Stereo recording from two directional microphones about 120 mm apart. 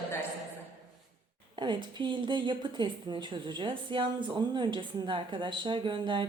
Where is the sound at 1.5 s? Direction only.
40° right (ahead or behind).